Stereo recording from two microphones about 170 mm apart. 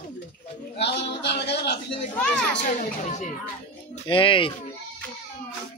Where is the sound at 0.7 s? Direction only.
90° left.